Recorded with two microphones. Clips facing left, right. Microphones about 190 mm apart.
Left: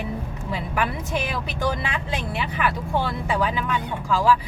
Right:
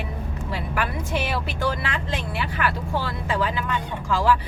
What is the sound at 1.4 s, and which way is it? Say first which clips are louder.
Speech: even; 15° left (ahead or behind).